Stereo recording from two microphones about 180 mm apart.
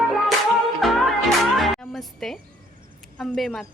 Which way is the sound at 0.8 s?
Centre (ahead or behind).